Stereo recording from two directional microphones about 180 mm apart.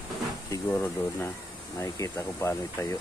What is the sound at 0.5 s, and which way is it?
Speech, 10° left (ahead or behind).